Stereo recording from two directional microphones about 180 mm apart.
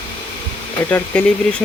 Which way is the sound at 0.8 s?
10° left (ahead or behind).